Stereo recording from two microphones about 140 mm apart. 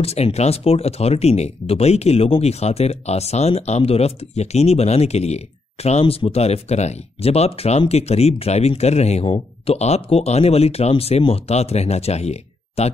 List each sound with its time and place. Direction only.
0.0 s speech: 50° left (ahead or behind)